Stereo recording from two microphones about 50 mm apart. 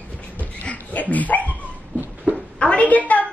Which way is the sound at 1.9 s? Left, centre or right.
Right.